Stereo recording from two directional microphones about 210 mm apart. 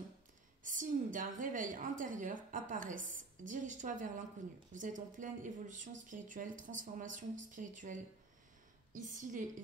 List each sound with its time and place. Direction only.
0.7 s a woman's voice: 40° right (ahead or behind)